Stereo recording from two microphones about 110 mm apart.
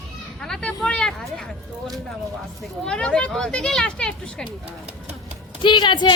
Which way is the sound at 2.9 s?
10° left (ahead or behind).